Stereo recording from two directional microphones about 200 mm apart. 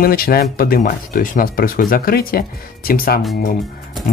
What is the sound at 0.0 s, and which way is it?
Speech, 45° left (ahead or behind).